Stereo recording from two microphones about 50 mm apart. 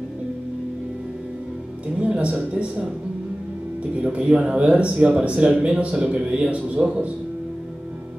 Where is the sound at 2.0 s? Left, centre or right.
Right.